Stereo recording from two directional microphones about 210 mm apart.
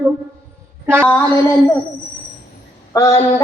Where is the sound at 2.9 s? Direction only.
15° left (ahead or behind).